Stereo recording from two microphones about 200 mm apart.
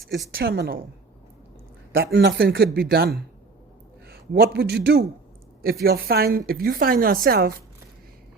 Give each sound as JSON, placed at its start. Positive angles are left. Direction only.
{"t": 0.3, "sound": "speech", "side_deg": -50}
{"t": 1.9, "sound": "a man's voice", "side_deg": -50}